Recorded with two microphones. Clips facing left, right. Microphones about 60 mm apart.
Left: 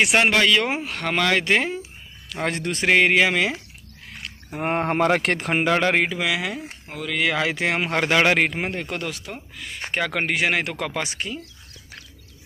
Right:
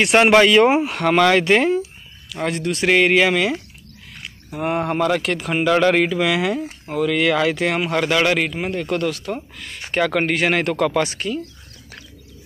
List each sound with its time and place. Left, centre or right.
0.0 s speech: centre
0.3 s speech: right; by 1.8 s centre
2.4 s speech: left
2.9 s speech: centre
4.5 s speech: left
4.7 s speech: left
5.7 s speech: centre
6.2 s speech: centre; by 8.8 s left
8.9 s speech: centre